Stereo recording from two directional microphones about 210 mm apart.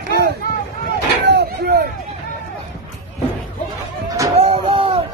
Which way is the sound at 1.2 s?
50° right (ahead or behind).